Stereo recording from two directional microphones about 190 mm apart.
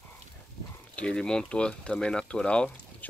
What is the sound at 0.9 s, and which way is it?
Speech, 5° left (ahead or behind).